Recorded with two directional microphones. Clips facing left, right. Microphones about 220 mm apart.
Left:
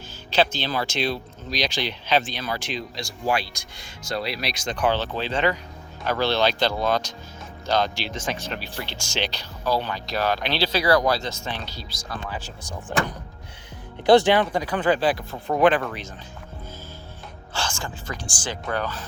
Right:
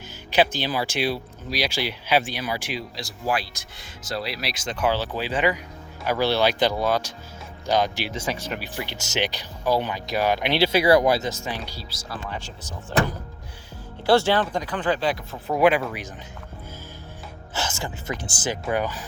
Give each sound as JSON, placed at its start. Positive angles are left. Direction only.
{"t": 0.3, "sound": "speech", "side_deg": -15}
{"t": 14.1, "sound": "speech", "side_deg": 15}
{"t": 17.5, "sound": "speech", "side_deg": -20}